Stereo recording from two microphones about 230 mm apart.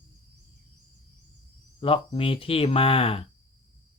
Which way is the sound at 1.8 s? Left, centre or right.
Left.